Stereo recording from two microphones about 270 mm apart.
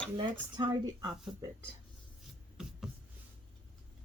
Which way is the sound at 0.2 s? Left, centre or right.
Centre.